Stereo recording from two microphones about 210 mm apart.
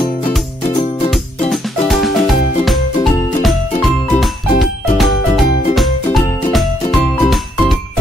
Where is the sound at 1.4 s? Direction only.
Centre (ahead or behind).